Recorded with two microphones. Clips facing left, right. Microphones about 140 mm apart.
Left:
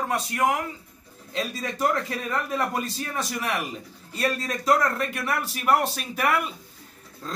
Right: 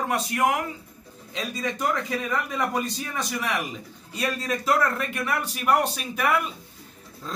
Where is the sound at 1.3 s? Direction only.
Centre (ahead or behind).